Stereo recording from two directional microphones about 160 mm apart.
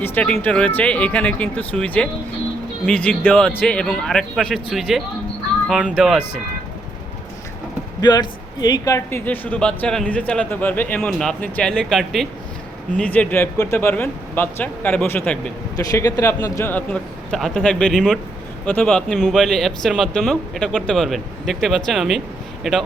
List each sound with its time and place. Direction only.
0.0 s speech: 10° left (ahead or behind)
8.0 s speech: 25° left (ahead or behind); by 15.5 s 10° left (ahead or behind)
15.7 s speech: 20° left (ahead or behind); by 22.8 s centre (ahead or behind)